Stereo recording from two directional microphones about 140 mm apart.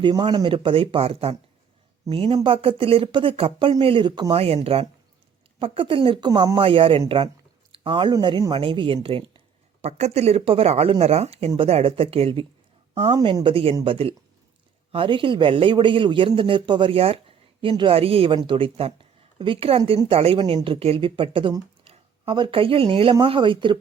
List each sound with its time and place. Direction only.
0.0 s a man's voice: 35° right (ahead or behind)
4.4 s a man's voice: 45° right (ahead or behind)
7.7 s a sound: 35° right (ahead or behind)
8.1 s a man's voice: 30° right (ahead or behind)
9.8 s a man's voice: 50° right (ahead or behind); by 23.7 s 35° right (ahead or behind)